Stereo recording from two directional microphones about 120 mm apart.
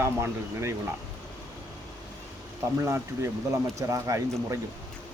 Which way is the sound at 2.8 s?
25° right (ahead or behind).